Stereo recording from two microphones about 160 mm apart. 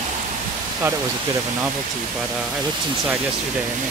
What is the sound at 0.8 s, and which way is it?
Speech, 15° right (ahead or behind).